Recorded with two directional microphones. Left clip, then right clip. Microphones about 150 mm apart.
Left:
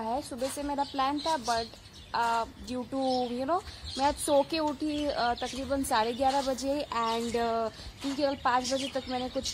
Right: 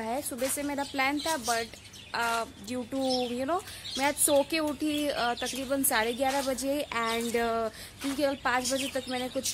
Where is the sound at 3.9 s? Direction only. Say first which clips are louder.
Even; 15° right (ahead or behind).